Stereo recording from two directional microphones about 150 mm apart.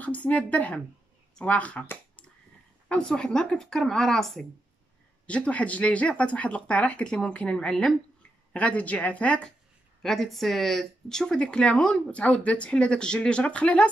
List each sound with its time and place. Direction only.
0.0 s speech: 10° left (ahead or behind)